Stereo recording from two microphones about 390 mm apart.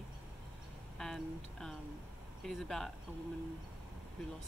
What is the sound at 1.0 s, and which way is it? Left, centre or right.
Speech, centre.